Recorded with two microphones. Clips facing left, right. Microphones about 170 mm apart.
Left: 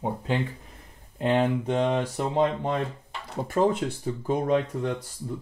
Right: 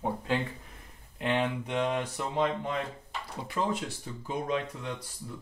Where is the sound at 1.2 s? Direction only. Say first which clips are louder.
Left 6 dB; 35° left (ahead or behind).